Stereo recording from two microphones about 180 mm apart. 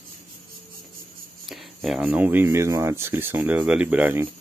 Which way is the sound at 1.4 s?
Centre (ahead or behind).